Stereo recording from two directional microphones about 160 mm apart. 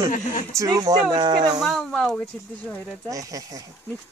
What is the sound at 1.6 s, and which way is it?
Speech, 5° left (ahead or behind).